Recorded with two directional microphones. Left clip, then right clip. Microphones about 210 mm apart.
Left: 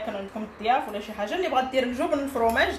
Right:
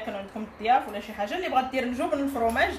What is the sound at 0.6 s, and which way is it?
A woman's voice, 10° left (ahead or behind).